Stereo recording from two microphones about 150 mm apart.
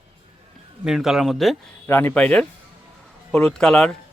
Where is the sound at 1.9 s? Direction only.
15° left (ahead or behind).